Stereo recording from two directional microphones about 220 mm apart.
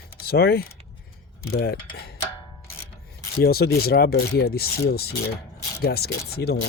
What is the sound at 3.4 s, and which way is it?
Speech, 45° left (ahead or behind).